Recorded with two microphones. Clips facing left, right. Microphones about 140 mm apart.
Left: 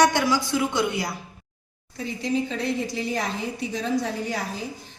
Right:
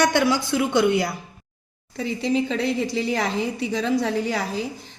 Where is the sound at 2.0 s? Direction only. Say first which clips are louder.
Right 3 dB; 90° right.